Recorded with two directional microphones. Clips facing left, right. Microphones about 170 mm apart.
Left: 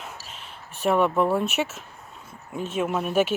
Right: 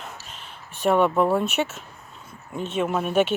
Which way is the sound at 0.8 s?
Centre (ahead or behind).